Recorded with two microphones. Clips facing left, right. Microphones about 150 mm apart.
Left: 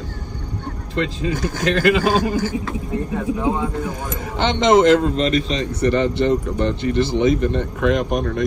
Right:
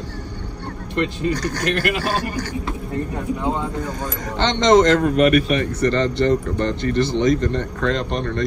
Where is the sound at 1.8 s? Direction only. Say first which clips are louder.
Left 6 dB; 90° left.